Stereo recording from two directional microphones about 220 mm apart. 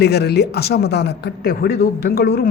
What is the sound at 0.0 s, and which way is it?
A woman's voice, 50° left (ahead or behind).